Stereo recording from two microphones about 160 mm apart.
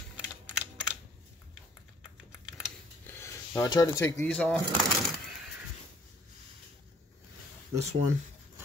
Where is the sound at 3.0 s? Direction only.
15° left (ahead or behind).